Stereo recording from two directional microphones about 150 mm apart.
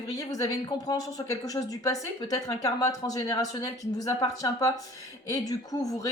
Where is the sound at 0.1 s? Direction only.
25° left (ahead or behind).